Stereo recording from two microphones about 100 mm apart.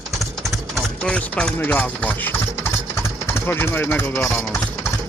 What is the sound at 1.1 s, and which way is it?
Speech, 10° left (ahead or behind).